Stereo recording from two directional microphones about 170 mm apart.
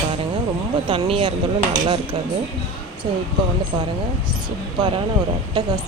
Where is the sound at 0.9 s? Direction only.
35° right (ahead or behind).